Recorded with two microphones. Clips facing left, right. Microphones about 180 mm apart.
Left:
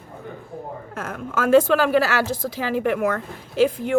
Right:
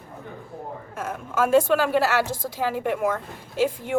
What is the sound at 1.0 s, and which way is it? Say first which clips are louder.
A woman's voice: right 2 dB; 90° left.